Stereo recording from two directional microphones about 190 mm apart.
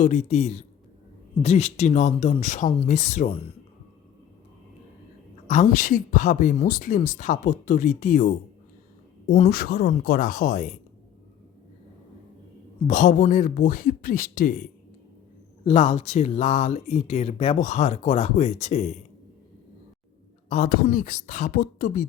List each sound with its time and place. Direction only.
0.0 s speech: 35° left (ahead or behind)
5.5 s speech: 40° left (ahead or behind)
9.5 s speech: 50° left (ahead or behind)
12.9 s speech: 40° left (ahead or behind)
15.6 s speech: 35° left (ahead or behind)
20.5 s speech: 40° left (ahead or behind)